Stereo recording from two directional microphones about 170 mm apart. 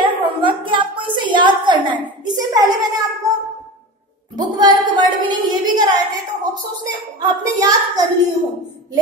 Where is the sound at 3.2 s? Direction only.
20° right (ahead or behind).